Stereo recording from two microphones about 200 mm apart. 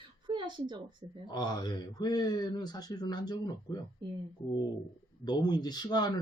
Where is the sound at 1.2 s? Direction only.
20° left (ahead or behind).